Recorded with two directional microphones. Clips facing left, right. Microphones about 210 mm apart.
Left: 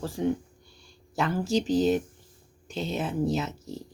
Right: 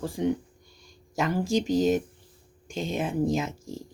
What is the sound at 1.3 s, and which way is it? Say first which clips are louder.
Speech: even; 15° right (ahead or behind).